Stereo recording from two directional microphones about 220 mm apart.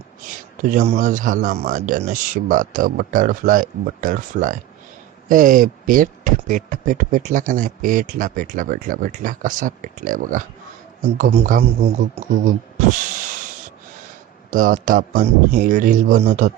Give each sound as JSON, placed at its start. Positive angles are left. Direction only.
{"t": 0.7, "sound": "speech", "side_deg": -35}
{"t": 14.5, "sound": "speech", "side_deg": -35}